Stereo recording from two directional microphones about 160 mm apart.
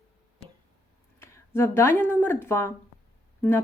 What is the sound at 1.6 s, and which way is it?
A woman's voice, 15° left (ahead or behind).